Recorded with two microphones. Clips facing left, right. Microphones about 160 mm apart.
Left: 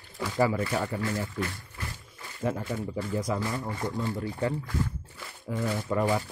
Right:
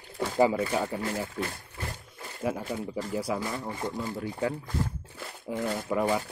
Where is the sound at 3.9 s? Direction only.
5° right (ahead or behind).